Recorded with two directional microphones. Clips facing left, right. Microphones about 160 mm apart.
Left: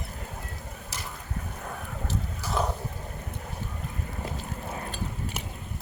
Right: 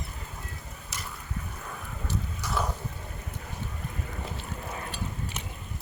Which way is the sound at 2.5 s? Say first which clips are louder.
Left 3 dB; 30° left (ahead or behind).